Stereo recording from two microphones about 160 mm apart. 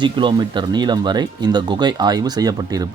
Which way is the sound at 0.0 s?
30° right (ahead or behind).